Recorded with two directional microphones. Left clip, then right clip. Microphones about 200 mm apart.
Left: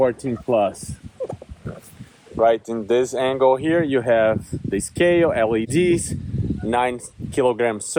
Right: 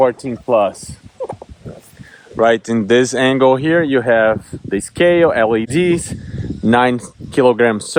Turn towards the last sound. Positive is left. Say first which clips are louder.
# right 7 dB
turn(degrees=-55)  # may be behind; listen again after turning